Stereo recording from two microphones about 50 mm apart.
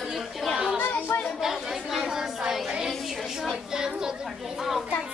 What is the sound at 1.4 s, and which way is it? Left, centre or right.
A woman's voice, centre.